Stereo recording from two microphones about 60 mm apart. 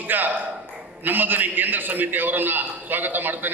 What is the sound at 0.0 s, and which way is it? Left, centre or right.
A man's voice, right.